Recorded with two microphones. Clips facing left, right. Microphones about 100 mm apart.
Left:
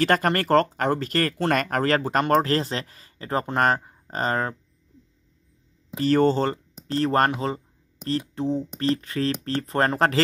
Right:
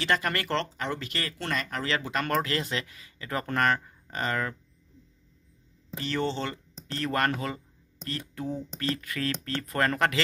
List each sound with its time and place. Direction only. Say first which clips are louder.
0.0 s speech: left 7 dB; 45° left (ahead or behind)
5.9 s speech: left 10 dB; 45° left (ahead or behind)
6.9 s speech: left 7 dB; 35° left (ahead or behind)